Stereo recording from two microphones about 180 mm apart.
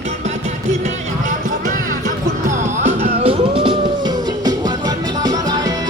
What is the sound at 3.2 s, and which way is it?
Music, 30° right (ahead or behind).